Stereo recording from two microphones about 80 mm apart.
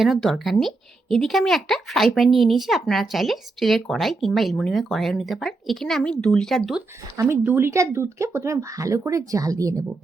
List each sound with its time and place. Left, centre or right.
0.0 s a woman's voice: centre
7.4 s speech: right